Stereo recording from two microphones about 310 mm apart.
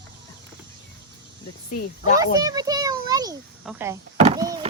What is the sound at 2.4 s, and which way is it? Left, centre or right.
A child's voice, centre.